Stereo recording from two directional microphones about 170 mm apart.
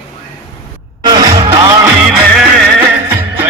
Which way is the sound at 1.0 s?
25° right (ahead or behind).